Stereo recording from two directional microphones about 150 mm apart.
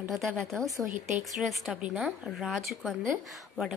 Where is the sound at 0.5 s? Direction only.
20° right (ahead or behind).